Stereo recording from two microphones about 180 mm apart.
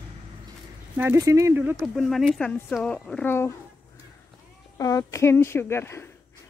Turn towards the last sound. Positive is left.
turn(degrees=15)  # may be behind; listen again after turning